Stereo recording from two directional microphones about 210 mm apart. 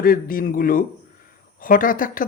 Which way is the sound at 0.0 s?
45° left (ahead or behind).